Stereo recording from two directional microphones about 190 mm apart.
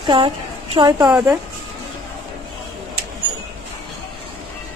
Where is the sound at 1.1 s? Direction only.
5° right (ahead or behind).